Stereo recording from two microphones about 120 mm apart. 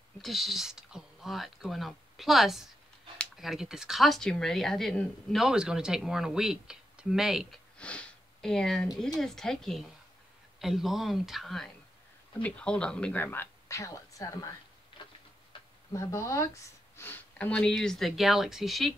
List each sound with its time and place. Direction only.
0.2 s speech: centre (ahead or behind)
7.7 s sniff: 10° left (ahead or behind)
9.2 s speech: 5° left (ahead or behind); by 14.5 s 25° left (ahead or behind)
15.9 s speech: 25° left (ahead or behind); by 18.9 s centre (ahead or behind)